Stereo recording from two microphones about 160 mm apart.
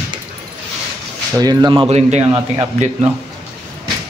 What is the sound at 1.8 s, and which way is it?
Speech, 45° right (ahead or behind).